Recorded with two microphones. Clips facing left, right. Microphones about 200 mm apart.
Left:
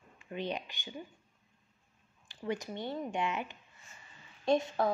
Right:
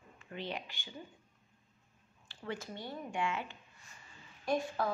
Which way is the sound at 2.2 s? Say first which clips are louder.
Left 5 dB; 15° left (ahead or behind).